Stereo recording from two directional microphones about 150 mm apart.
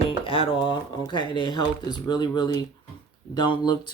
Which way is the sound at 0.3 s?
35° left (ahead or behind).